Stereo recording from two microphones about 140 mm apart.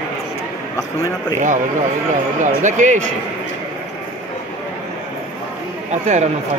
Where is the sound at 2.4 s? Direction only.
65° right (ahead or behind).